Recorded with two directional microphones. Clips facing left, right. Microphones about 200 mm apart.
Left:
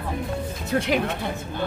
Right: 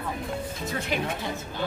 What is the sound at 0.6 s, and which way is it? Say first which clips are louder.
Speech: left 11 dB; 90° left.